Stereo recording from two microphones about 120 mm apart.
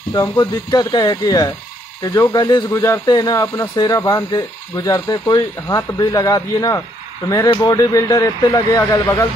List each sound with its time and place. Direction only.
0.1 s speech: 35° left (ahead or behind)